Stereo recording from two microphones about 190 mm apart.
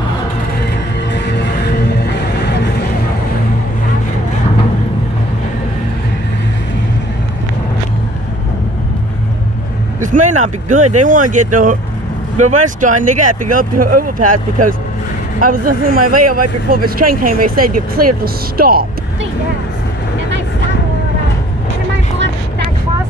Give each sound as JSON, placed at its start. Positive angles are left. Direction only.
{"t": 1.1, "sound": "music", "side_deg": 65}
{"t": 9.9, "sound": "speech", "side_deg": -40}